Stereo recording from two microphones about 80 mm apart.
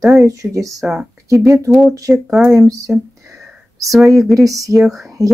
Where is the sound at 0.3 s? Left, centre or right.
Right.